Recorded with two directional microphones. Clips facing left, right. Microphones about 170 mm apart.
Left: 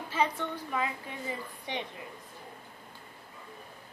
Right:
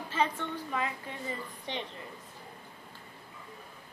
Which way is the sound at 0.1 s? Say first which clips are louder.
Left 1 dB; 10° left (ahead or behind).